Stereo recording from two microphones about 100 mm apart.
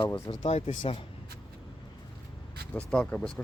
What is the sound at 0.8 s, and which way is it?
Speech, 65° left (ahead or behind).